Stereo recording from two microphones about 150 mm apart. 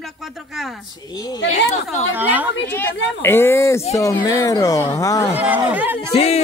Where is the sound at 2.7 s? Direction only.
15° left (ahead or behind).